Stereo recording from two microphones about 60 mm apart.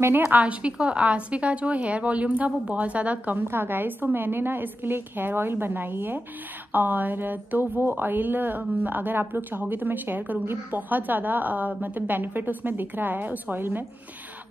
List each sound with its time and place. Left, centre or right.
0.2 s a woman's voice: right